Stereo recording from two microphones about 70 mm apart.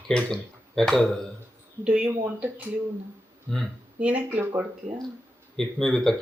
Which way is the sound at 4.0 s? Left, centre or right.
Centre.